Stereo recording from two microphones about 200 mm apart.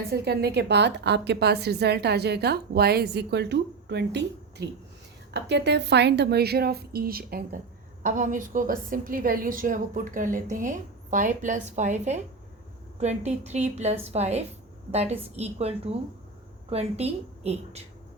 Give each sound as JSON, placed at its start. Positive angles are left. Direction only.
{"t": 0.1, "sound": "a woman's voice", "side_deg": -55}